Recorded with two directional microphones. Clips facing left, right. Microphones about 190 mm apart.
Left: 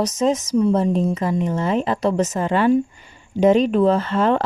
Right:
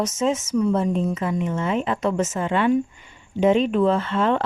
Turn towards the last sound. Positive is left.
turn(degrees=40)  # may be behind; listen again after turning